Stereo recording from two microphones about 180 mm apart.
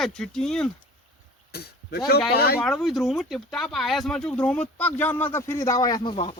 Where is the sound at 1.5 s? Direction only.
60° left (ahead or behind).